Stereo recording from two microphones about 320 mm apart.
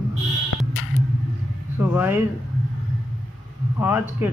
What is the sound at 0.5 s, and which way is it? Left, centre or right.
Music, left.